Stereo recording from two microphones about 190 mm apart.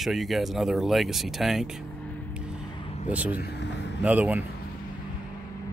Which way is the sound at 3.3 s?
60° left (ahead or behind).